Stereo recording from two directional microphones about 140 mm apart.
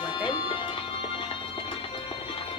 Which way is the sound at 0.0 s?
35° left (ahead or behind).